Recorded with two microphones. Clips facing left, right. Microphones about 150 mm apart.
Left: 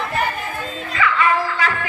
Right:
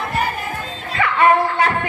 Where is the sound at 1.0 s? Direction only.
55° right (ahead or behind).